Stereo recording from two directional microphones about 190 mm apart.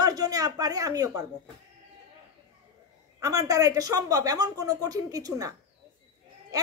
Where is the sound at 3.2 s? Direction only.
15° right (ahead or behind).